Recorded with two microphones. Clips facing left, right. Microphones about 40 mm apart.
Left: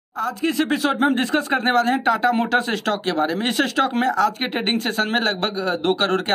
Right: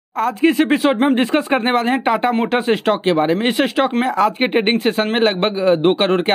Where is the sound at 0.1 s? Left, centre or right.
Right.